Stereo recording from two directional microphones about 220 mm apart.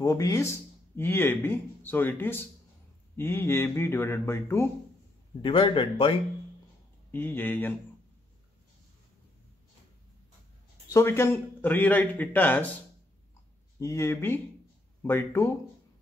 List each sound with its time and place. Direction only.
0.0 s speech: 15° left (ahead or behind)
5.4 s speech: 20° left (ahead or behind)
7.1 s speech: 10° left (ahead or behind)
10.9 s speech: 10° left (ahead or behind)
13.7 s speech: 15° left (ahead or behind)